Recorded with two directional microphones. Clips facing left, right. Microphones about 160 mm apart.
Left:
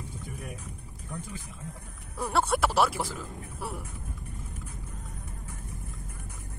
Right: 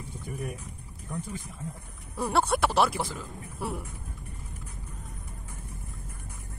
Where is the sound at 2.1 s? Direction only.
Centre (ahead or behind).